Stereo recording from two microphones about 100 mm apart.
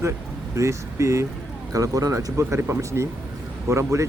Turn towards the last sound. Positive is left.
turn(degrees=-30)  # may be behind; listen again after turning